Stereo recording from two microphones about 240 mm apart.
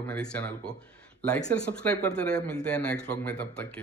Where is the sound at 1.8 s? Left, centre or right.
Centre.